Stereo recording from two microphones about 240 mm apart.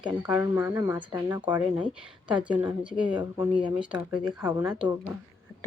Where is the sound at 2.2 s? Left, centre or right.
Centre.